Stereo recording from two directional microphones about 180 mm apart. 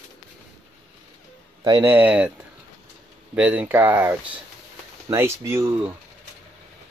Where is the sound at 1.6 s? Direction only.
15° right (ahead or behind).